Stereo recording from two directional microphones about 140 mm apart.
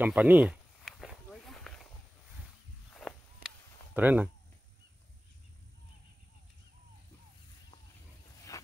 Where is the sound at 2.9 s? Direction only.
5° left (ahead or behind).